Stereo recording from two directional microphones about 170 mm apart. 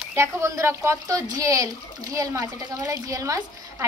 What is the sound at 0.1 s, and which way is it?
Speech, 15° right (ahead or behind).